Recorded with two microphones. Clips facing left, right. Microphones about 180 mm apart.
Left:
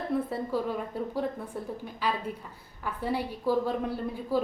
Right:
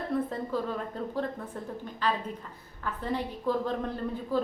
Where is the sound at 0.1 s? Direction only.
10° left (ahead or behind).